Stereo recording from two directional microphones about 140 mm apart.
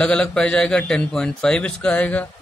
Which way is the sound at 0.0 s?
5° left (ahead or behind).